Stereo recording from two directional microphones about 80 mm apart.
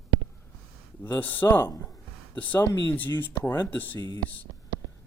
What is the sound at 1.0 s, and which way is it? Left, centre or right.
Speech, left.